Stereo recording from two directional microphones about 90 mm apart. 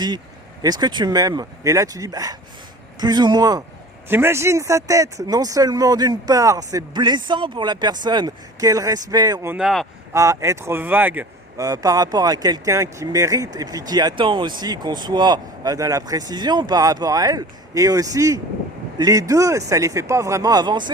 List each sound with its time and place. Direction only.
0.6 s speech: 50° right (ahead or behind)
4.1 s speech: 25° right (ahead or behind); by 9.4 s 45° right (ahead or behind)
9.6 s speech: 5° right (ahead or behind)
10.1 s speech: 35° right (ahead or behind)
11.5 s speech: 40° right (ahead or behind)
20.5 s speech: 50° right (ahead or behind)